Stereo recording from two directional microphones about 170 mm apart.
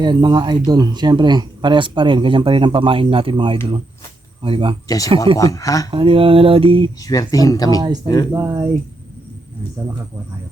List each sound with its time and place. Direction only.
0.0 s speech: 25° right (ahead or behind)
4.4 s mantra: 30° right (ahead or behind)
4.9 s speech: 20° left (ahead or behind)
5.9 s mantra: 30° right (ahead or behind)
7.0 s speech: 20° left (ahead or behind)
8.3 s speech: 20° right (ahead or behind)